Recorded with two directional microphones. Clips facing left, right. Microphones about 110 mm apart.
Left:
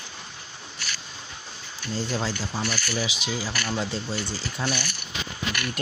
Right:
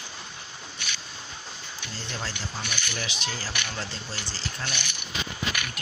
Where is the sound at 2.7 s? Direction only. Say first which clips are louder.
Left 4 dB; 20° right (ahead or behind).